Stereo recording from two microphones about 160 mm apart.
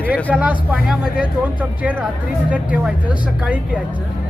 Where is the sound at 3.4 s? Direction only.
10° right (ahead or behind).